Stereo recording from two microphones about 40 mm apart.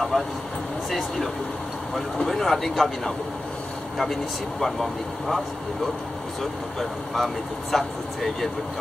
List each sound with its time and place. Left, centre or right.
0.1 s speech: centre
4.0 s speech: centre
6.4 s speech: centre